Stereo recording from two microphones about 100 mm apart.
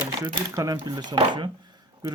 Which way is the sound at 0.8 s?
45° right (ahead or behind).